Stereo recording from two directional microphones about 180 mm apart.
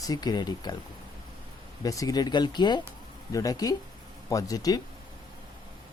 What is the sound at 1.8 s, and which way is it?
Speech, 20° left (ahead or behind).